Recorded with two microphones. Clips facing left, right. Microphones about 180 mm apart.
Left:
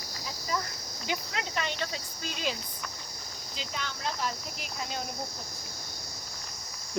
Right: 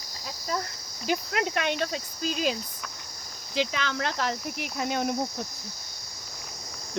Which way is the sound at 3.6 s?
90° right.